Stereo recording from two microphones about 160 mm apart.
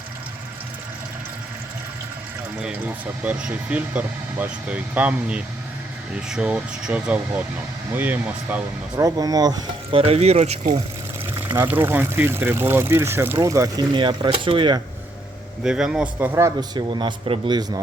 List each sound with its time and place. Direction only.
2.6 s speech: 5° right (ahead or behind)
9.0 s speech: 20° right (ahead or behind); by 10.8 s 45° right (ahead or behind)
11.5 s speech: 15° right (ahead or behind)
13.9 s speech: 30° right (ahead or behind)
15.6 s speech: 5° right (ahead or behind)
16.3 s a man's voice: 20° right (ahead or behind)